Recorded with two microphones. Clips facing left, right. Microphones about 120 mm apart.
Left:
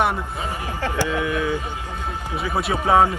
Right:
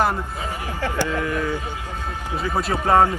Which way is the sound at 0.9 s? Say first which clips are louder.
Even; 15° left (ahead or behind).